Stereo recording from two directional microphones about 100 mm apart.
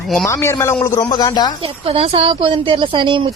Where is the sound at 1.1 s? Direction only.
45° left (ahead or behind).